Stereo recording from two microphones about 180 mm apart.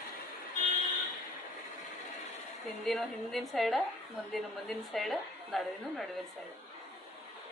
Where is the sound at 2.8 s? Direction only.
Centre (ahead or behind).